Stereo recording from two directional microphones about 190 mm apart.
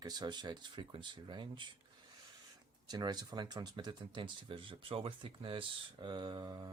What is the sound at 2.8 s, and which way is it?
Speech, 20° right (ahead or behind).